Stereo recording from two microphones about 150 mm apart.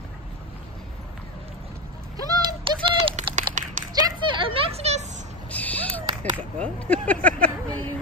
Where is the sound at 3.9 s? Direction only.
35° right (ahead or behind).